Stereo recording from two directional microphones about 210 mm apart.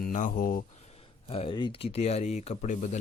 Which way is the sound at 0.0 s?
40° left (ahead or behind).